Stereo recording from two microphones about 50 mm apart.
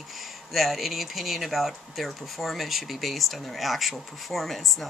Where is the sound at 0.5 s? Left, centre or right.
Centre.